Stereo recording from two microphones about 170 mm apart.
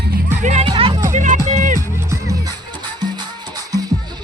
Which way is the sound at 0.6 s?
30° right (ahead or behind).